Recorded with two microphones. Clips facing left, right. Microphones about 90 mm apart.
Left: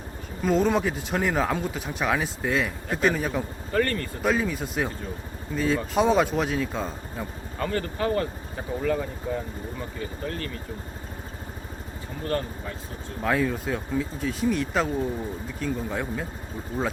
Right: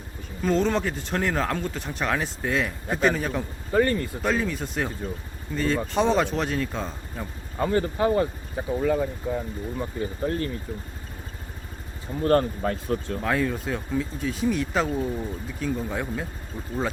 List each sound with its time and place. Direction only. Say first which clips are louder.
0.4 s speech: left 1 dB; 5° left (ahead or behind)
3.7 s speech: right 4 dB; 15° right (ahead or behind)
4.2 s speech: left 5 dB; 5° left (ahead or behind)
7.6 s speech: right 4 dB; 20° right (ahead or behind)
10.0 s speech: right 6 dB; 30° right (ahead or behind)
12.2 s speech: right 8 dB; 45° right (ahead or behind)
12.9 s speech: right 12 dB; 90° right
13.2 s speech: left 3 dB; centre (ahead or behind)